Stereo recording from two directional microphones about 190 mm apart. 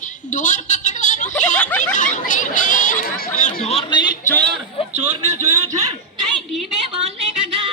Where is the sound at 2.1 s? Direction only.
40° left (ahead or behind).